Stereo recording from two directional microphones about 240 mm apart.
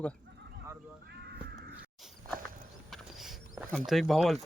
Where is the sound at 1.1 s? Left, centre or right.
Right.